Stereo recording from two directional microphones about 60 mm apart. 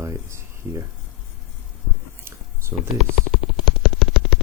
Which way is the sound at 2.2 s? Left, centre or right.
Right.